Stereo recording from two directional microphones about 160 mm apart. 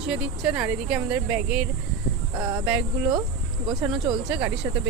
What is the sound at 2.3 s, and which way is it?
Speech, 20° right (ahead or behind).